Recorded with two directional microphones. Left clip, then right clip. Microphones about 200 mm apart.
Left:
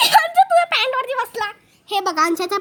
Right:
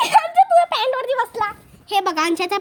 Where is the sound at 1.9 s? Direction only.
15° left (ahead or behind).